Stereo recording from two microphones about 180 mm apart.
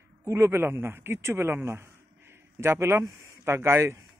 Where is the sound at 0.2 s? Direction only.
15° right (ahead or behind).